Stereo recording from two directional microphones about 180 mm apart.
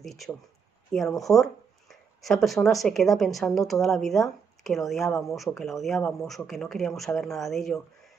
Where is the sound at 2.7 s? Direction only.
Centre (ahead or behind).